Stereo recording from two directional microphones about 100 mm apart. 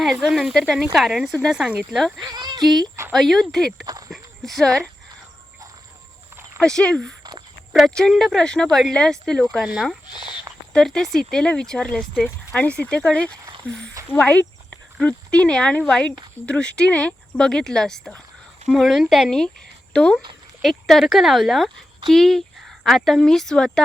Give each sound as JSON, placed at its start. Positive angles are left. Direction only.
{"t": 0.0, "sound": "speech", "side_deg": 0}
{"t": 1.5, "sound": "speech", "side_deg": -10}
{"t": 1.9, "sound": "speech", "side_deg": 0}
{"t": 2.1, "sound": "speech", "side_deg": -45}
{"t": 3.1, "sound": "speech", "side_deg": 0}
{"t": 4.1, "sound": "a sound", "side_deg": 5}
{"t": 6.6, "sound": "speech", "side_deg": 5}